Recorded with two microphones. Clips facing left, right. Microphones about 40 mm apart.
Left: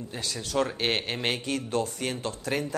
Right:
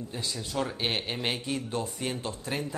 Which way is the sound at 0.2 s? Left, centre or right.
Left.